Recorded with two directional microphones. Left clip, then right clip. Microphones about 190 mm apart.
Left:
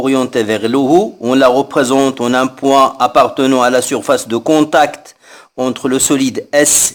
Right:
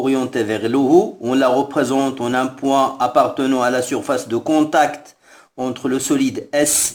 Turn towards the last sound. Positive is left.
turn(degrees=40)  # may be behind; listen again after turning